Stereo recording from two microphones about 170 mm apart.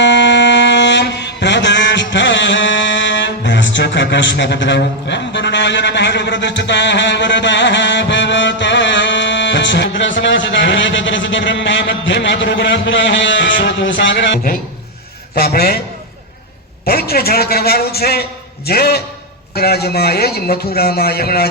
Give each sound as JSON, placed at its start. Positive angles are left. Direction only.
{"t": 0.0, "sound": "a sound", "side_deg": 90}
{"t": 15.4, "sound": "a man's voice", "side_deg": 65}
{"t": 16.8, "sound": "a man's voice", "side_deg": 65}